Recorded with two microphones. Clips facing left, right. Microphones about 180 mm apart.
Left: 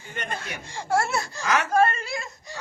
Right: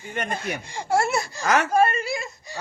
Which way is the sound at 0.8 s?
15° right (ahead or behind).